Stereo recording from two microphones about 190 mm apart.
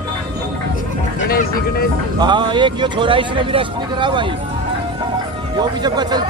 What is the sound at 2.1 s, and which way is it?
A man's voice, 25° right (ahead or behind).